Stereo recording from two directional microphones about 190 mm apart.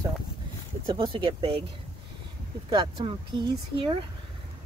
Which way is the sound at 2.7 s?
25° right (ahead or behind).